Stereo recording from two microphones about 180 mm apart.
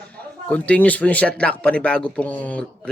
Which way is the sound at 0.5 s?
10° left (ahead or behind).